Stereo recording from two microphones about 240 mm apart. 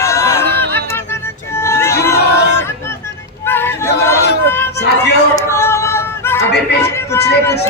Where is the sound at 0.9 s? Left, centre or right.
Centre.